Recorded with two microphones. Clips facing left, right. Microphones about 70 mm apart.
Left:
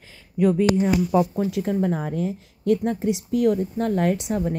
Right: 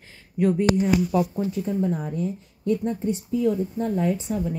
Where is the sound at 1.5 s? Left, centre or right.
Left.